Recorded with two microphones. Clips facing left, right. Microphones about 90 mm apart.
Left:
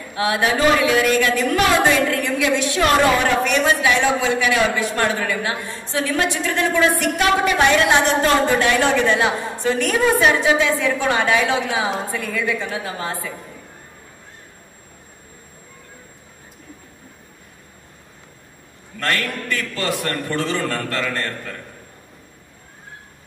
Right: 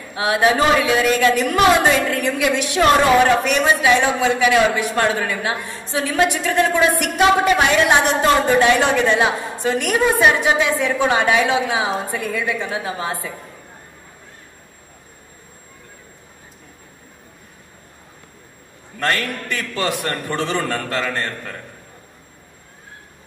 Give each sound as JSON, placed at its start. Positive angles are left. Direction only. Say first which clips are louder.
{"t": 0.1, "sound": "a woman's voice", "louder": "right 3 dB", "side_deg": -20}
{"t": 18.9, "sound": "a woman's voice", "louder": "right 1 dB", "side_deg": -20}